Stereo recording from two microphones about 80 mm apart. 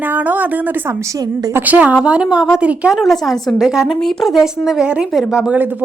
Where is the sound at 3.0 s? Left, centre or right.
Centre.